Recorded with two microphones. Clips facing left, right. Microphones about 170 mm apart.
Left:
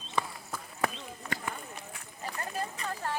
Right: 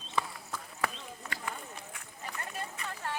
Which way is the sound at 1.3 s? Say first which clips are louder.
Left 3 dB; 30° left (ahead or behind).